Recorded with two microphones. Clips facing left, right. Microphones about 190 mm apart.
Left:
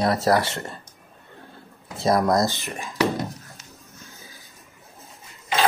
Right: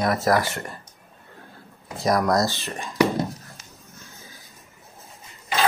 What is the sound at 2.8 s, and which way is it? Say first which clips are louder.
Whispering: right 2 dB; centre (ahead or behind).